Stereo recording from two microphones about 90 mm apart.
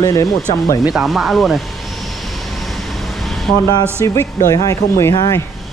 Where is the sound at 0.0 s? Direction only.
40° left (ahead or behind).